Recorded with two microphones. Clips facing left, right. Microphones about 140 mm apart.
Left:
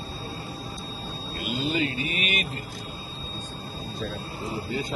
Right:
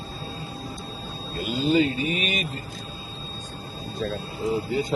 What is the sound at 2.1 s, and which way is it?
Speech, 35° right (ahead or behind).